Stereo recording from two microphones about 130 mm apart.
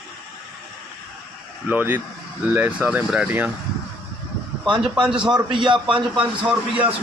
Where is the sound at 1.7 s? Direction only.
15° right (ahead or behind).